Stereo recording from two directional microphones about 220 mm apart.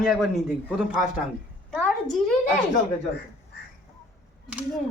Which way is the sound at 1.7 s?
Centre (ahead or behind).